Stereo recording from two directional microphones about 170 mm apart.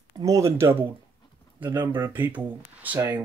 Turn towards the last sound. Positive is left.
turn(degrees=-10)  # may be behind; listen again after turning